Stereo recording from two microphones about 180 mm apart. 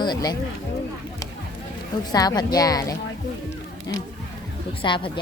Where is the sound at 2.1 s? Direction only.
20° left (ahead or behind).